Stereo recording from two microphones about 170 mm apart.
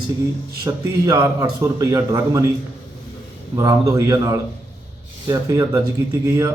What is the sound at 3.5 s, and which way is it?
A man's voice, 20° right (ahead or behind).